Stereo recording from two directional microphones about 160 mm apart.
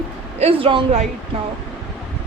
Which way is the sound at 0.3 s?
35° right (ahead or behind).